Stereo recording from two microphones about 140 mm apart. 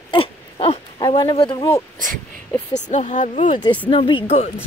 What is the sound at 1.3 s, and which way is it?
Speech, 35° left (ahead or behind).